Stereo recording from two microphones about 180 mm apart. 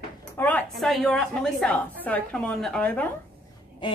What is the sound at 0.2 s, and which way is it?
A woman's voice, 10° left (ahead or behind).